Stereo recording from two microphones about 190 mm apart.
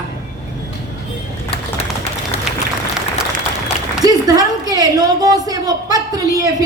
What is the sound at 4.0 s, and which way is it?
A woman's voice, 20° right (ahead or behind).